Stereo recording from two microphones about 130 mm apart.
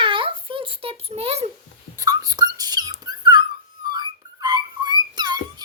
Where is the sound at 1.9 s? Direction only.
30° right (ahead or behind).